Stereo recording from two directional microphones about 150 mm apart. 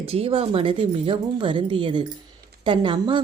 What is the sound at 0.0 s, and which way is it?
A woman's voice, 40° right (ahead or behind).